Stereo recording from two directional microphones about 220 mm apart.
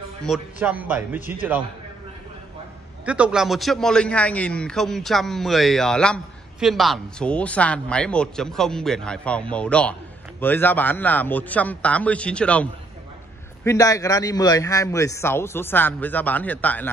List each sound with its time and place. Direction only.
0.2 s a man's voice: centre (ahead or behind)
3.1 s a man's voice: 5° right (ahead or behind)
13.7 s a man's voice: 15° left (ahead or behind)